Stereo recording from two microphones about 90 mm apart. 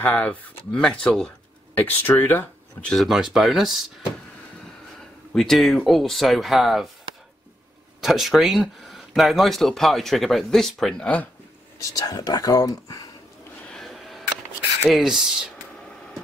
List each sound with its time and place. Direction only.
0.0 s speech: 15° left (ahead or behind)
1.8 s speech: 20° left (ahead or behind)
2.9 s speech: centre (ahead or behind)
5.3 s speech: 5° left (ahead or behind)
8.0 s speech: centre (ahead or behind)
11.8 s speech: 45° left (ahead or behind)
13.7 s a sound: 5° left (ahead or behind)
14.9 s speech: 5° right (ahead or behind)